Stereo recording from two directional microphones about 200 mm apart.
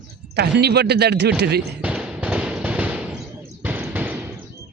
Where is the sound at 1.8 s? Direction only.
5° right (ahead or behind).